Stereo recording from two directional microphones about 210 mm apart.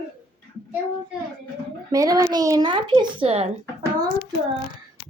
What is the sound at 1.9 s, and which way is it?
Speech, 15° right (ahead or behind).